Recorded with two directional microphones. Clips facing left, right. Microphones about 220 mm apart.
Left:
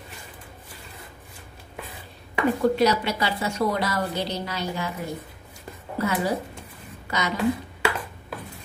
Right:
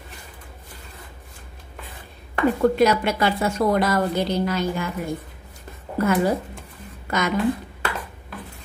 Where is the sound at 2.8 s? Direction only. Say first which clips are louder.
Right 3 dB; 50° right (ahead or behind).